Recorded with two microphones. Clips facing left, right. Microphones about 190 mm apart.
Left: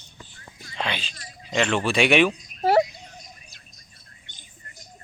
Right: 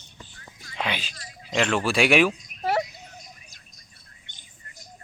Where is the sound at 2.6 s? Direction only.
30° left (ahead or behind).